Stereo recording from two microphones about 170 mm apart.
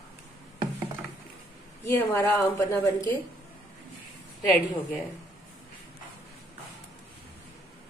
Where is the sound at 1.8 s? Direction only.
15° left (ahead or behind).